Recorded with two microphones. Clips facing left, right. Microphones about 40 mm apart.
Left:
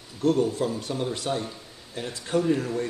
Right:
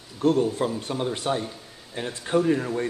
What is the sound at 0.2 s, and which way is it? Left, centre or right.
Speech, right.